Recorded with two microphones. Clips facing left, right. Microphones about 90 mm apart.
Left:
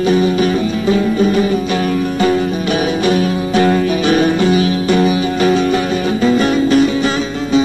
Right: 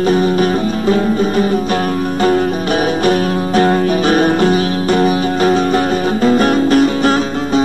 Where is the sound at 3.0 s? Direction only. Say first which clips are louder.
Right 1 dB; 45° right (ahead or behind).